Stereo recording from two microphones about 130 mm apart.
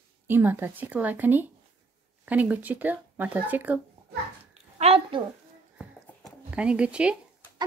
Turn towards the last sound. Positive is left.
turn(degrees=-10)  # may be behind; listen again after turning